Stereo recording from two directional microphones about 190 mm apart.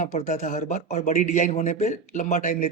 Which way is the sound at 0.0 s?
40° left (ahead or behind).